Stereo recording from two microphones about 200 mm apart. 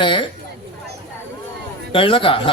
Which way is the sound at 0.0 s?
25° left (ahead or behind).